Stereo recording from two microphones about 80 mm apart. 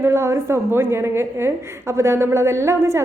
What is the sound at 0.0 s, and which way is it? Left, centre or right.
A woman's voice, right.